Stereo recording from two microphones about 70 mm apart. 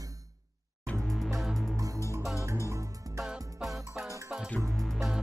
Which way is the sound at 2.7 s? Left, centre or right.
Right.